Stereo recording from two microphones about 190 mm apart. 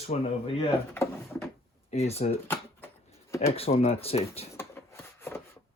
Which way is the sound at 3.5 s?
30° left (ahead or behind).